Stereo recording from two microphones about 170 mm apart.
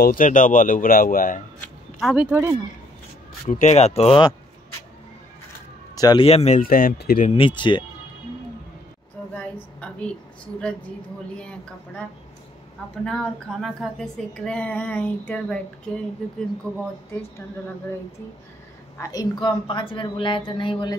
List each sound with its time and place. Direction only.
0.0 s speech: 55° left (ahead or behind)
2.0 s speech: centre (ahead or behind)
3.4 s speech: 45° left (ahead or behind)
5.9 s a man's voice: 25° left (ahead or behind)
6.2 s speech: 40° left (ahead or behind)
6.6 s speech: 55° left (ahead or behind)
7.2 s a woman's voice: 30° left (ahead or behind)
9.3 s a sound: 5° left (ahead or behind)
13.0 s a woman's voice: 5° left (ahead or behind)
18.9 s a woman's voice: 20° left (ahead or behind)